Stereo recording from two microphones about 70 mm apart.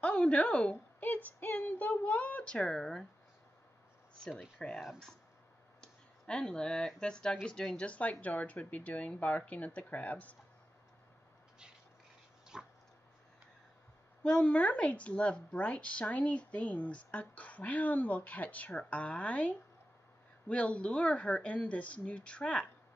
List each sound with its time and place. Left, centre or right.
0.0 s a woman's voice: centre
4.2 s speech: centre
5.8 s clicking: centre
7.0 s speech: centre
7.8 s speech: centre
12.5 s dog: centre
14.2 s speech: centre